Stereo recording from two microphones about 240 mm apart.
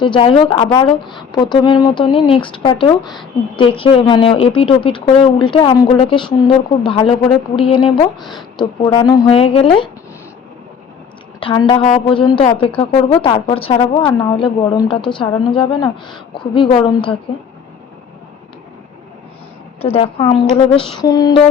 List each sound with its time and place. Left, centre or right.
0.0 s a woman's voice: left
3.0 s a woman's voice: centre
3.5 s a woman's voice: left
8.2 s a woman's voice: centre
8.5 s a woman's voice: centre
11.3 s a woman's voice: left
19.8 s a woman's voice: left
21.0 s a sound: centre